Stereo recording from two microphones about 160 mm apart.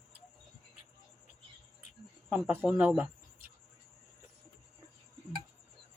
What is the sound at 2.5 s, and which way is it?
Speech, 10° right (ahead or behind).